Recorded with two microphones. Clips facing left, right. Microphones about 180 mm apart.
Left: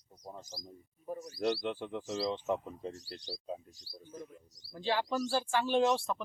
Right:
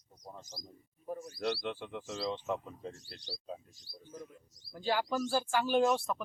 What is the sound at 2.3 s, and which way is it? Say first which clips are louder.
Speech: right 1 dB; 10° left (ahead or behind).